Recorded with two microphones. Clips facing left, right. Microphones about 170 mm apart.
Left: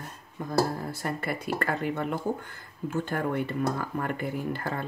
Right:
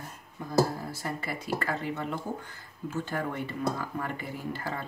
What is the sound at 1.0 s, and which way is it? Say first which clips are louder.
Speech: left 5 dB; 55° left (ahead or behind).